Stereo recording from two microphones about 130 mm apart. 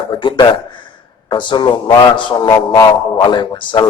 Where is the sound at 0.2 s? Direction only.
35° left (ahead or behind).